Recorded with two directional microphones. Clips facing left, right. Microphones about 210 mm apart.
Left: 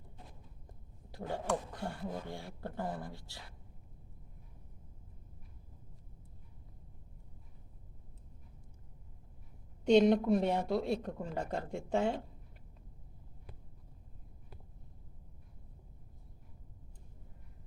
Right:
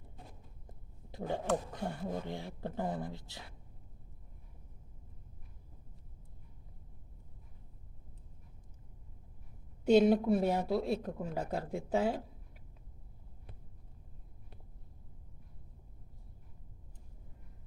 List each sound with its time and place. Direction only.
0.7 s a sound: 20° right (ahead or behind)
2.2 s speech: 20° right (ahead or behind)
9.8 s speech: 5° right (ahead or behind)